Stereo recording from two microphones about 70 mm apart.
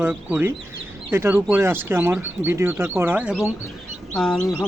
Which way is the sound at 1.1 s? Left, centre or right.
Right.